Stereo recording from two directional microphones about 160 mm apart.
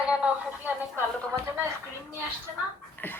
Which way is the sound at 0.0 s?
5° right (ahead or behind).